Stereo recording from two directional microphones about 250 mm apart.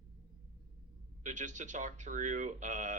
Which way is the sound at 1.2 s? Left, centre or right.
Right.